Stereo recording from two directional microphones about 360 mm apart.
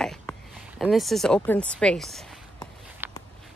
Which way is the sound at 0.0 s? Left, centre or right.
Centre.